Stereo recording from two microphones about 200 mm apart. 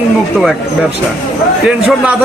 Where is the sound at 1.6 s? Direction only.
5° right (ahead or behind).